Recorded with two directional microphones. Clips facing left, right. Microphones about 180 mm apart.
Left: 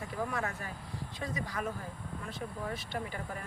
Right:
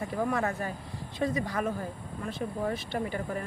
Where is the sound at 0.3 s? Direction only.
45° right (ahead or behind).